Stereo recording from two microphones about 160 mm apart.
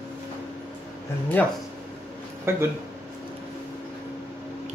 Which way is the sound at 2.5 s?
15° right (ahead or behind).